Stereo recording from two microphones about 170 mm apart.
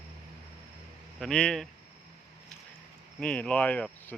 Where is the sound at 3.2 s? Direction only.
5° left (ahead or behind).